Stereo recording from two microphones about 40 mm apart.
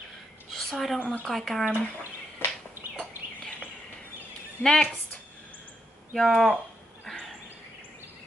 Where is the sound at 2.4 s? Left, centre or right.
Left.